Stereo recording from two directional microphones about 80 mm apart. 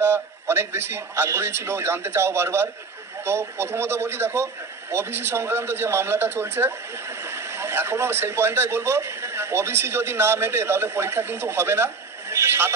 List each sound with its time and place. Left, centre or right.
0.0 s a man's voice: right